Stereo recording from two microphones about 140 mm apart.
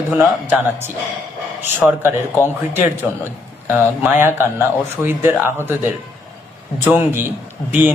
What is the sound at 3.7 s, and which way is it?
Speech, 15° right (ahead or behind).